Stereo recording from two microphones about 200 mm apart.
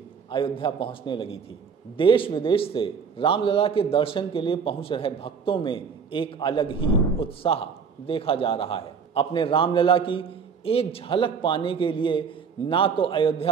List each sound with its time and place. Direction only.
0.3 s a man's voice: 25° left (ahead or behind)